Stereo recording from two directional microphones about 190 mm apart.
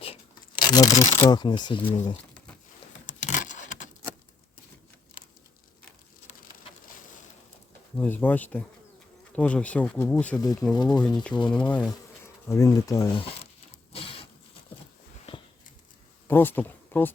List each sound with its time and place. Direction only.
0.0 s speech: 25° left (ahead or behind)
3.1 s a sound: 40° left (ahead or behind)
7.9 s speech: 10° left (ahead or behind)
10.3 s speech: 20° left (ahead or behind)
11.9 s bee: 15° left (ahead or behind)
13.9 s printer: 30° left (ahead or behind)
16.2 s speech: 10° left (ahead or behind)